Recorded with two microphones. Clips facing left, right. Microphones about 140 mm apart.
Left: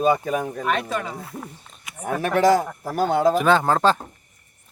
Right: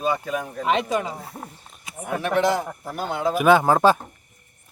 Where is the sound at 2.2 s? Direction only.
45° left (ahead or behind).